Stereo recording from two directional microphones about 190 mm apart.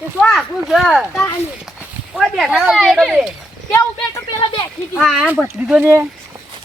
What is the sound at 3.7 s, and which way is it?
Speech, 15° left (ahead or behind).